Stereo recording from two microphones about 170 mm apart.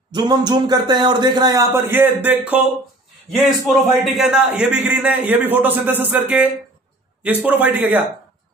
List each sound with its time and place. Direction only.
0.1 s a man's voice: 25° right (ahead or behind); by 8.0 s 10° right (ahead or behind)